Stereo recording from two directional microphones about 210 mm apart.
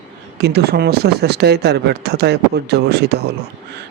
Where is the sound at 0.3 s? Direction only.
50° right (ahead or behind).